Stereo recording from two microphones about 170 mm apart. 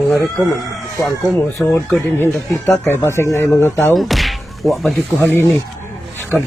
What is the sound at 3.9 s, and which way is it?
Speech, centre (ahead or behind).